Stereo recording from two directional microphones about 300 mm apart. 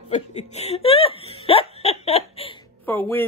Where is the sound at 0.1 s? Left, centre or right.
Left.